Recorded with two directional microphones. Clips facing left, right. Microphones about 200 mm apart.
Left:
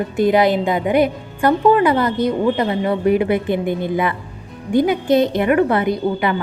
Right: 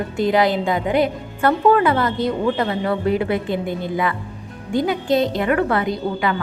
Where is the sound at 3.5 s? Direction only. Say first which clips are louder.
Left 4 dB; 55° left (ahead or behind).